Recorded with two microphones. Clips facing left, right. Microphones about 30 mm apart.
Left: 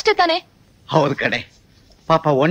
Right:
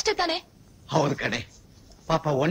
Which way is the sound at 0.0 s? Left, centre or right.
Left.